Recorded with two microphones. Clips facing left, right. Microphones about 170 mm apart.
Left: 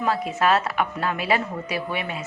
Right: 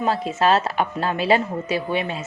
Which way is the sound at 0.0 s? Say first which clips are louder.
Right 2 dB; 25° right (ahead or behind).